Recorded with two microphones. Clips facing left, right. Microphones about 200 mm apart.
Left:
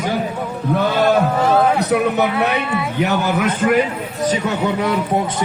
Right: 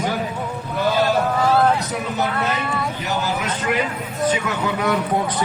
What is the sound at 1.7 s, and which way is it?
A man's voice, 65° left (ahead or behind).